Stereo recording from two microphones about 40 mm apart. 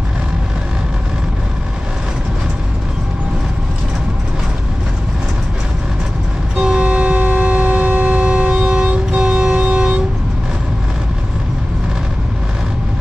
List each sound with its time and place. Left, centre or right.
6.6 s vehicle: right
7.1 s vehicle: right